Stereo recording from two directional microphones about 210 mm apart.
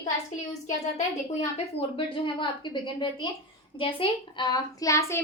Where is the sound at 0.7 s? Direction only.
35° left (ahead or behind).